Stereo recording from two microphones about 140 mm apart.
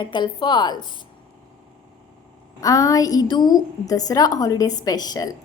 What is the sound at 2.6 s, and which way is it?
A woman's voice, 25° left (ahead or behind).